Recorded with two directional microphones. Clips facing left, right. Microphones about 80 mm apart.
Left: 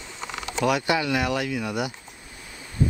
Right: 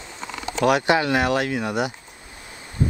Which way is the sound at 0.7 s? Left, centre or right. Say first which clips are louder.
Right 5 dB; right.